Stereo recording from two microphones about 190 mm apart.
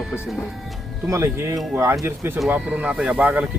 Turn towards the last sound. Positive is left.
turn(degrees=-5)  # may be behind; listen again after turning